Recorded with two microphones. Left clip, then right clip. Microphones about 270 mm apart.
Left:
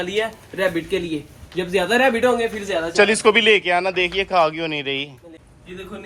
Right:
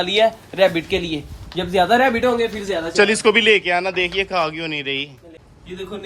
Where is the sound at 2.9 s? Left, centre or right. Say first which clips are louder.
Even; centre.